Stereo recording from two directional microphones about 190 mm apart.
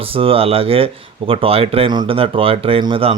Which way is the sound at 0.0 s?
30° right (ahead or behind).